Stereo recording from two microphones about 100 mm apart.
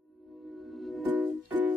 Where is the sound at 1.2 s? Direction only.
15° right (ahead or behind).